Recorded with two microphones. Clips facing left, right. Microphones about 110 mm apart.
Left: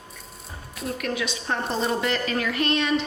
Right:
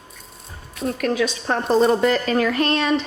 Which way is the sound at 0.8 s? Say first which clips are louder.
Right 7 dB; 40° right (ahead or behind).